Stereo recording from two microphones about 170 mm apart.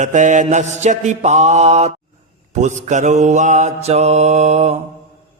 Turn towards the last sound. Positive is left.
turn(degrees=-40)  # may be behind; listen again after turning